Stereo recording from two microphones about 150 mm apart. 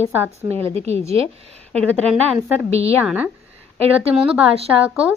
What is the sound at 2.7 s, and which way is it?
Speech, 45° right (ahead or behind).